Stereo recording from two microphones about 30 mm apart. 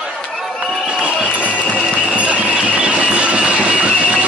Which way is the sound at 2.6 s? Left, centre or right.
Right.